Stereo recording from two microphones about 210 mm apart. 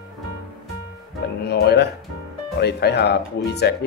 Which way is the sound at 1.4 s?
50° left (ahead or behind).